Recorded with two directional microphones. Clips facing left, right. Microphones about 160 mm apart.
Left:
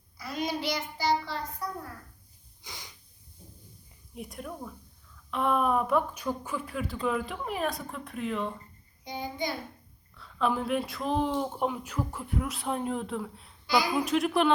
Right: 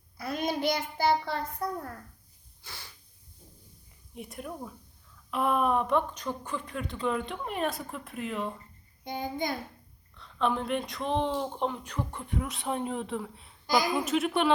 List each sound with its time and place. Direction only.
0.2 s a child's voice: 55° right (ahead or behind)
2.6 s a sound: 15° left (ahead or behind)
4.1 s speech: centre (ahead or behind)
9.0 s a child's voice: 50° right (ahead or behind)
10.2 s speech: 5° left (ahead or behind)